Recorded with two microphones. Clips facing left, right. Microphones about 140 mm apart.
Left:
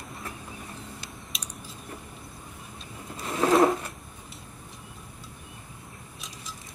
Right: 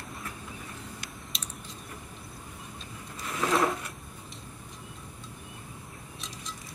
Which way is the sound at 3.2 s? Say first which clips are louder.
Left 6 dB; 30° left (ahead or behind).